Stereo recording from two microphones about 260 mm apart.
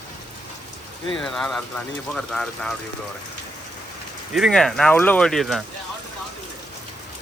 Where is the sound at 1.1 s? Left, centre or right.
Centre.